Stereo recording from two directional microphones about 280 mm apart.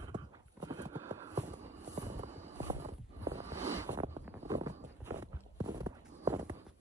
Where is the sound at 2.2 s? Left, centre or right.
Right.